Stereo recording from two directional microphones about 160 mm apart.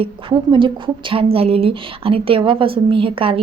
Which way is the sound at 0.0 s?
30° right (ahead or behind).